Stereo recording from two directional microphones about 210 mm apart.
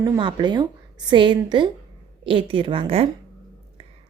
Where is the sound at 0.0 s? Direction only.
20° right (ahead or behind).